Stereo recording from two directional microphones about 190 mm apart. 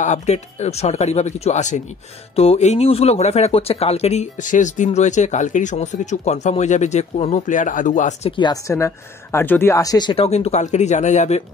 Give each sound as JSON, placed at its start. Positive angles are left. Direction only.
{"t": 0.0, "sound": "speech", "side_deg": 35}
{"t": 8.3, "sound": "speech", "side_deg": 25}